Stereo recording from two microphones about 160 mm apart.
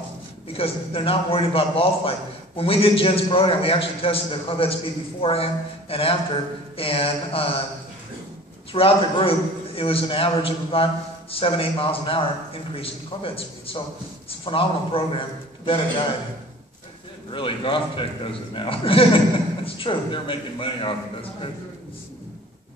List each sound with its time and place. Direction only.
0.5 s a man's voice: 35° left (ahead or behind)
8.7 s a man's voice: 35° left (ahead or behind)
17.3 s a man's voice: 30° left (ahead or behind)